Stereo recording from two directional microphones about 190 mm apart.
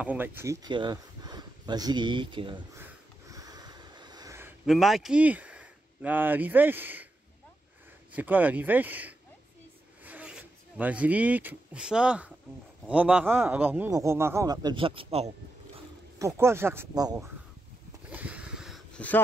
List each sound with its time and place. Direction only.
0.0 s speech: 10° right (ahead or behind); by 2.6 s 25° right (ahead or behind)
2.8 s snort: 20° right (ahead or behind)
4.6 s speech: centre (ahead or behind)
8.1 s a man's voice: 10° right (ahead or behind); by 15.3 s 30° right (ahead or behind)
16.2 s a man's voice: 15° right (ahead or behind)
18.1 s a sound: 5° right (ahead or behind)
18.9 s speech: 10° left (ahead or behind)